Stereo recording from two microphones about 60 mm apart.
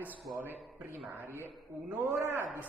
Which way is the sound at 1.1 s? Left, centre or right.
Right.